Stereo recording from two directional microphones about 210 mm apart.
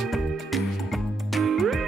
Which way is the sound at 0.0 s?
Centre (ahead or behind).